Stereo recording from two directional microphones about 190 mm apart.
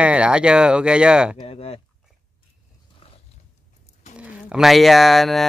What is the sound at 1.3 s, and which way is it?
Speech, 30° left (ahead or behind).